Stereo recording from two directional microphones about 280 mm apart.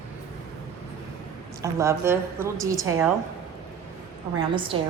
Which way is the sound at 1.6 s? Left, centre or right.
Centre.